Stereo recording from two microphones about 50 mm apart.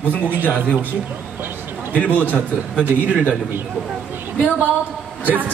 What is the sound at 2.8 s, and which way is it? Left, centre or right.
Speech, right.